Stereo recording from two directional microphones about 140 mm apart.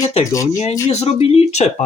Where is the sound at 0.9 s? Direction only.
50° left (ahead or behind).